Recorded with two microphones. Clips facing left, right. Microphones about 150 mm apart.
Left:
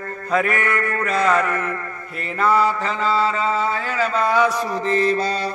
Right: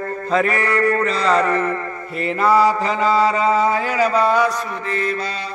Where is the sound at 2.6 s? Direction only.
35° right (ahead or behind).